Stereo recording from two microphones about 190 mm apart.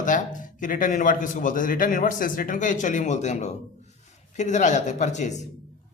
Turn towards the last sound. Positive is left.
turn(degrees=40)  # may be behind; listen again after turning